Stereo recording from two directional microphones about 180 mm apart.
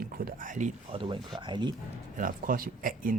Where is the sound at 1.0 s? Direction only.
25° right (ahead or behind).